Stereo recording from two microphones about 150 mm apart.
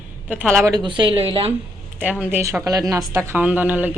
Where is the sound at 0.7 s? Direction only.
30° right (ahead or behind).